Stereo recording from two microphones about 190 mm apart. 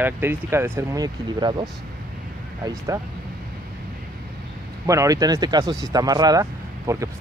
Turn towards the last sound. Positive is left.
turn(degrees=-15)  # may be behind; listen again after turning